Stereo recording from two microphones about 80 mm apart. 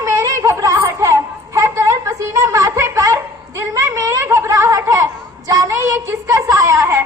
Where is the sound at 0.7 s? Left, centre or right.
Right.